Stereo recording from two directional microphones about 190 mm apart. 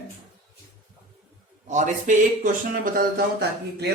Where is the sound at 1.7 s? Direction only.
40° right (ahead or behind).